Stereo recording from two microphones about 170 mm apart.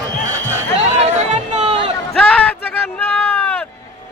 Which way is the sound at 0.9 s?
45° right (ahead or behind).